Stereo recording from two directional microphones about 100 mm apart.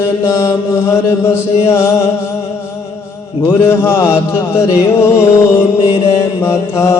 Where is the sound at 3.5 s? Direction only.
25° left (ahead or behind).